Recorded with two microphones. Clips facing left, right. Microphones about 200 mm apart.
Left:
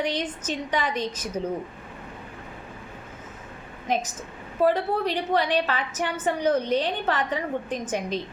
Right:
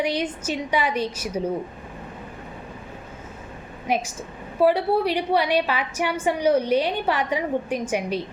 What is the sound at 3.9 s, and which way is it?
A woman's voice, 10° right (ahead or behind).